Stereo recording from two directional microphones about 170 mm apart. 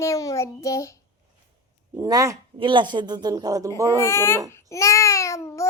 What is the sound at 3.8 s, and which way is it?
Speech, 15° left (ahead or behind).